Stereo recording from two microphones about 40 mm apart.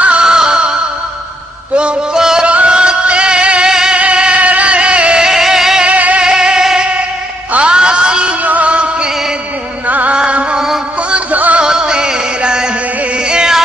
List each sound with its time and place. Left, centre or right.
0.2 s music: centre
2.1 s music: centre
2.4 s music: right
4.4 s a sound: right
5.2 s a sound: centre
5.9 s music: right
6.2 s music: centre
7.5 s a sound: right
8.5 s music: right
9.8 s music: right
10.1 s music: right
11.3 s music: right
11.6 s music: right
13.3 s a sound: centre